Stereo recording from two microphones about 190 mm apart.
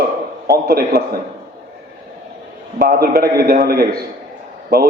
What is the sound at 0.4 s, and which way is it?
Speech, 55° right (ahead or behind).